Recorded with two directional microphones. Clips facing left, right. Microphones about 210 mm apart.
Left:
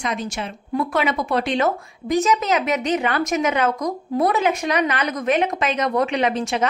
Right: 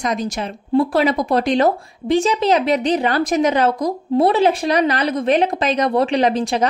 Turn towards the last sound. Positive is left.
turn(degrees=-35)  # may be behind; listen again after turning